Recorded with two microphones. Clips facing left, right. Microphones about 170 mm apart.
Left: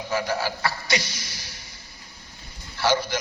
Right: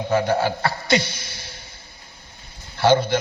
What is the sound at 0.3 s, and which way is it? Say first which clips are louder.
Speech: right 6 dB; 55° right (ahead or behind).